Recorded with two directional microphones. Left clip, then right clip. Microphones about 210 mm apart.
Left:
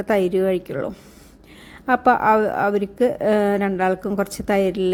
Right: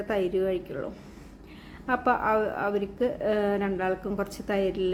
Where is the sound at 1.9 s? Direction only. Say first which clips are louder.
Left 9 dB; 35° left (ahead or behind).